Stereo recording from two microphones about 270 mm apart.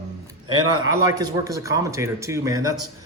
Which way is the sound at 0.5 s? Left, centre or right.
Right.